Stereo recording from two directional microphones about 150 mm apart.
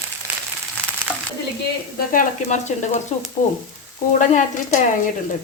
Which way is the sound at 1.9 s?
65° left (ahead or behind).